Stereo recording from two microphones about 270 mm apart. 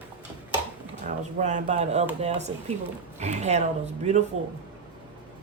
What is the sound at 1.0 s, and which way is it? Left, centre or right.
Speech, right.